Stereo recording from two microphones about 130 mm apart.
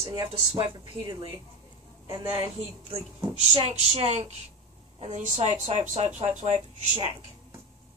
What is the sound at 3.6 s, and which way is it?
Speech, 55° right (ahead or behind).